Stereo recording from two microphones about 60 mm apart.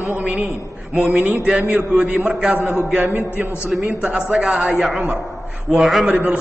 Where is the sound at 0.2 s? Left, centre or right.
Right.